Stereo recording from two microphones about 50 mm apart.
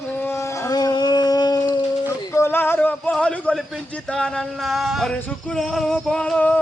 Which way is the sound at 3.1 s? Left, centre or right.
Centre.